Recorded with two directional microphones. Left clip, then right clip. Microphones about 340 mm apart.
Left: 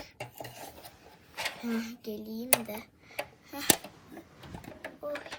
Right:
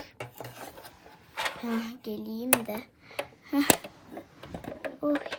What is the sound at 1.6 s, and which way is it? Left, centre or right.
Speech, right.